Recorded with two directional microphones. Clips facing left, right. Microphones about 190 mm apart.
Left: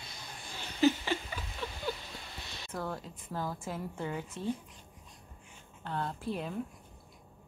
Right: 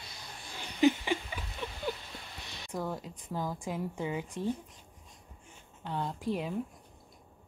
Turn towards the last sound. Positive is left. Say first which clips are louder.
# right 3 dB
turn(degrees=-10)  # may be behind; listen again after turning